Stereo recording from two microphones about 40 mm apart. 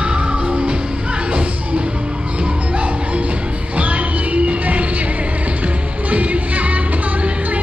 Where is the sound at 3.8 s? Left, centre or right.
Right.